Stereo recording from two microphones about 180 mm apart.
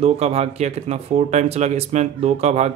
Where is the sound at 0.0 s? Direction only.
35° right (ahead or behind).